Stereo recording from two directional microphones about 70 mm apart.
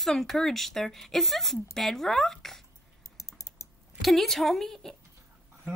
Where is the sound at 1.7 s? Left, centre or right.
Centre.